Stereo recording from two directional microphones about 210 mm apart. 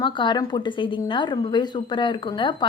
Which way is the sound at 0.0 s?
20° left (ahead or behind).